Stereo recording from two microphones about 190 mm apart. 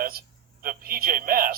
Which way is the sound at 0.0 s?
50° right (ahead or behind).